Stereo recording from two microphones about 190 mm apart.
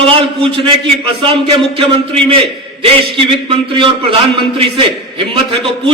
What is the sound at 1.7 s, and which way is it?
Speech, 30° right (ahead or behind).